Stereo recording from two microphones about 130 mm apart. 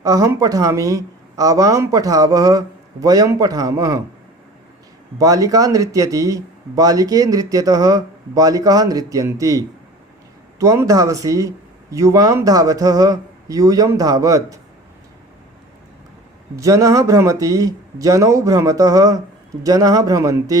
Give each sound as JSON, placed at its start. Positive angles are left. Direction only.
{"t": 0.0, "sound": "speech", "side_deg": -25}
{"t": 5.1, "sound": "speech", "side_deg": -25}
{"t": 16.6, "sound": "speech", "side_deg": -25}